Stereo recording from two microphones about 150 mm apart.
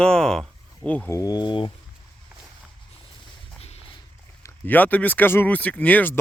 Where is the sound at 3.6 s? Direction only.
45° left (ahead or behind).